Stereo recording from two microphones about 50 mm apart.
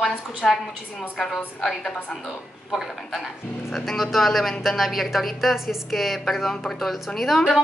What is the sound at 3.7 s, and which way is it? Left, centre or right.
Speech, centre.